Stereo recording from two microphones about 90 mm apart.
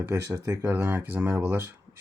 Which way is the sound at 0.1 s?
35° right (ahead or behind).